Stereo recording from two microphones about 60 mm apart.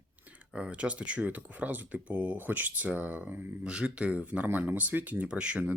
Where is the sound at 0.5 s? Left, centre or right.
Centre.